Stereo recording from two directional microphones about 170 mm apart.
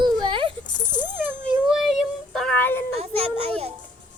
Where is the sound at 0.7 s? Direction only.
45° left (ahead or behind).